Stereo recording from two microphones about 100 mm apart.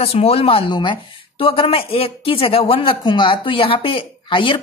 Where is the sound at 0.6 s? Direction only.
50° left (ahead or behind).